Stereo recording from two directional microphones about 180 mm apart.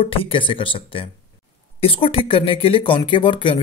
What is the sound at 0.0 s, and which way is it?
Speech, 30° left (ahead or behind).